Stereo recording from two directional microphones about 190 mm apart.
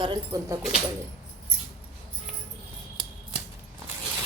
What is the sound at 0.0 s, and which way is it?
Speech, 20° right (ahead or behind).